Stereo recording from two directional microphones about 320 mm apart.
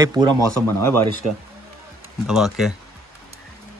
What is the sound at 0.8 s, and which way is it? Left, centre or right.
Speech, right.